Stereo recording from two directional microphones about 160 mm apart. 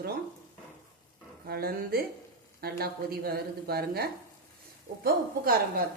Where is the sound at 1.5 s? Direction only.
70° right (ahead or behind).